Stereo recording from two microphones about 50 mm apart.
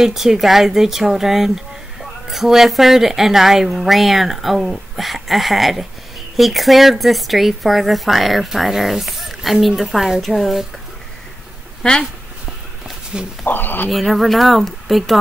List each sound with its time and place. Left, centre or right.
0.0 s speech: centre
12.0 s a sound: centre
13.1 s speech: centre
13.5 s speech: left
13.8 s speech: centre